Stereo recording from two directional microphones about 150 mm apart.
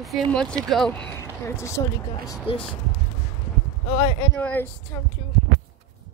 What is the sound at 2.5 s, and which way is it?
Speech, 35° left (ahead or behind).